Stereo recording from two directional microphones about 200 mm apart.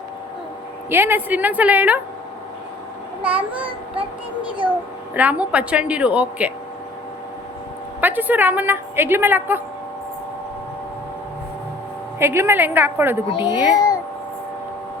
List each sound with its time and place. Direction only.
0.9 s a woman's voice: 10° right (ahead or behind)
3.2 s a woman's voice: 5° right (ahead or behind)
5.1 s a woman's voice: 5° right (ahead or behind)
8.0 s a woman's voice: 10° right (ahead or behind)
12.2 s a woman's voice: 10° right (ahead or behind)
13.5 s a child's voice: 15° left (ahead or behind)